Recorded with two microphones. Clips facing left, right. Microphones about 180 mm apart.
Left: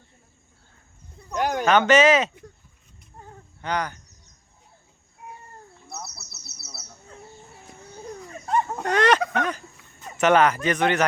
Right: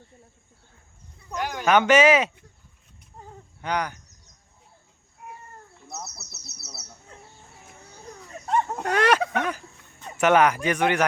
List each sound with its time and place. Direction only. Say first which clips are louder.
1.4 s speech: left 6 dB; 50° left (ahead or behind)
1.9 s speech: even; 10° right (ahead or behind)
3.2 s a sound: right 1 dB; 10° right (ahead or behind)
6.0 s bird: even; 10° left (ahead or behind)
8.4 s a sound: even; centre (ahead or behind)
10.2 s speech: even; 10° right (ahead or behind)